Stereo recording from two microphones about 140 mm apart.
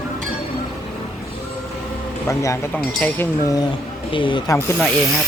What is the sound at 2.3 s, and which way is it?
Speech, 20° left (ahead or behind).